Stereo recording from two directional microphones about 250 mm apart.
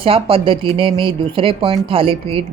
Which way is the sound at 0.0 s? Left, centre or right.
Right.